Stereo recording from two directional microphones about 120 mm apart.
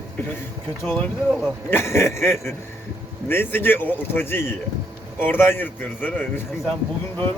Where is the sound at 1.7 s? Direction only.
20° left (ahead or behind).